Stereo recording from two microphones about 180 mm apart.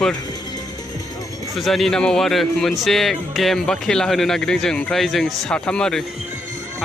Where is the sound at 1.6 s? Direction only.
Centre (ahead or behind).